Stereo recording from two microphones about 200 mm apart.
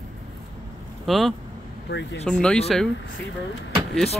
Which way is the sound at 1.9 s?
60° left (ahead or behind).